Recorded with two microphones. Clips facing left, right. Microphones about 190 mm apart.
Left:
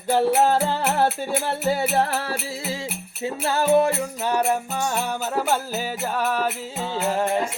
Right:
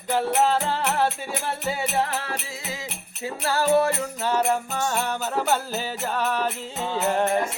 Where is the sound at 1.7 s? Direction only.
40° left (ahead or behind).